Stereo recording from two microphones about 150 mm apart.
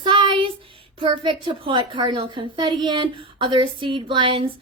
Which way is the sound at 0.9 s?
30° right (ahead or behind).